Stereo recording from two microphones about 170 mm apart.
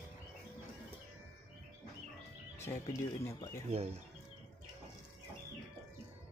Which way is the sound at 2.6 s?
15° left (ahead or behind).